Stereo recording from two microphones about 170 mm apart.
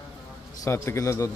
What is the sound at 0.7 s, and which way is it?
Speech, 15° left (ahead or behind).